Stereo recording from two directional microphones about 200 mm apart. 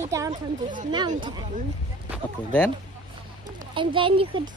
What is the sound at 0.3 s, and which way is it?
Speech, 40° right (ahead or behind).